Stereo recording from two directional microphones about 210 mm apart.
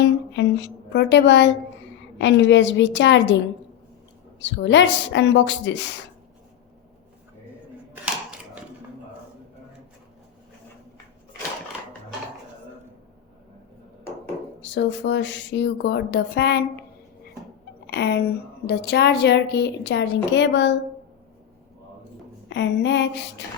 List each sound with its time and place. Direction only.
0.0 s a woman's voice: 55° left (ahead or behind)
4.4 s speech: 60° left (ahead or behind)
14.6 s speech: 60° left (ahead or behind)
17.9 s a woman's voice: 50° left (ahead or behind)
22.4 s speech: 55° left (ahead or behind)